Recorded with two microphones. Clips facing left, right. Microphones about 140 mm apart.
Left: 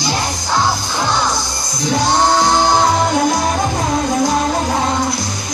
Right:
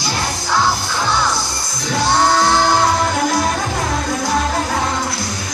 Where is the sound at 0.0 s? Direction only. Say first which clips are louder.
Left 2 dB; 15° left (ahead or behind).